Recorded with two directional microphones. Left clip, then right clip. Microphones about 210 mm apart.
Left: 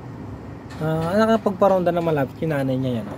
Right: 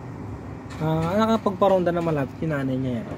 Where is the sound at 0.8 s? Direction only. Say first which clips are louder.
Left 3 dB; 10° left (ahead or behind).